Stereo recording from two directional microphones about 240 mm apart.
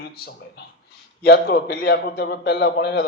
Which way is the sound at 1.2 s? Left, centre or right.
Left.